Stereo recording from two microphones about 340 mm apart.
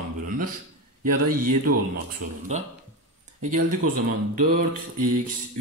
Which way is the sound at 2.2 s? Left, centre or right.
Right.